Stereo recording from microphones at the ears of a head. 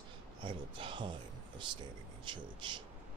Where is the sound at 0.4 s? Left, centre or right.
Right.